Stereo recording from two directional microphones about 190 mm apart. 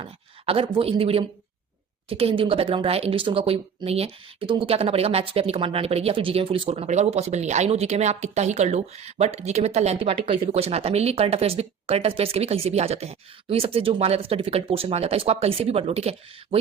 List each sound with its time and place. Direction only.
0.0 s speech: 30° right (ahead or behind)